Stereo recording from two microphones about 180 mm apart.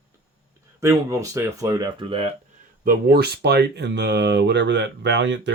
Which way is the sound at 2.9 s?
55° right (ahead or behind).